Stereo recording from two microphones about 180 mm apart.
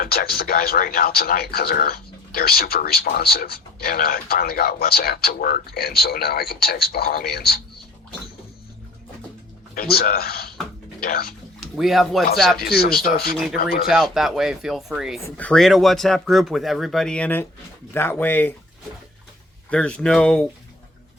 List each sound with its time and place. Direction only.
0.0 s speech: 55° left (ahead or behind)
9.7 s speech: 60° left (ahead or behind)
11.6 s speech: centre (ahead or behind)
12.6 s speech: 60° left (ahead or behind)
13.8 s speech: centre (ahead or behind)
19.7 s speech: 5° left (ahead or behind)